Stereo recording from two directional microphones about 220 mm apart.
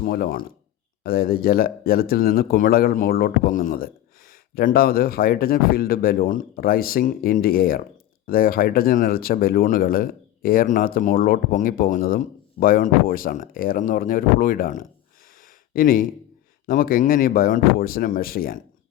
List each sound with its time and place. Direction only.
0.0 s speech: 40° left (ahead or behind)